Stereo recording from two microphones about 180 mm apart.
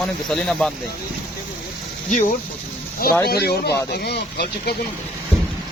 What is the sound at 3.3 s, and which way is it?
Speech, 60° left (ahead or behind).